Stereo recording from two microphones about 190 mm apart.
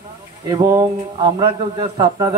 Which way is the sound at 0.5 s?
20° right (ahead or behind).